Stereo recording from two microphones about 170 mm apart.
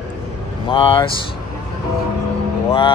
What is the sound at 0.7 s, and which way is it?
Speech, 30° left (ahead or behind).